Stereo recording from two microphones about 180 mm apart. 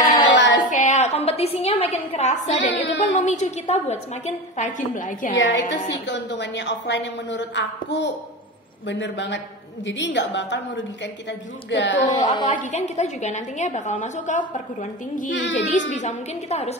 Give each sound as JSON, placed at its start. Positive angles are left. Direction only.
{"t": 0.3, "sound": "child singing", "side_deg": 80}
{"t": 0.7, "sound": "a woman's voice", "side_deg": 45}
{"t": 2.7, "sound": "child singing", "side_deg": 90}
{"t": 3.2, "sound": "a woman's voice", "side_deg": 40}
{"t": 5.4, "sound": "a woman's voice", "side_deg": 85}
{"t": 12.1, "sound": "a woman's voice", "side_deg": 25}
{"t": 12.5, "sound": "a woman's voice", "side_deg": 40}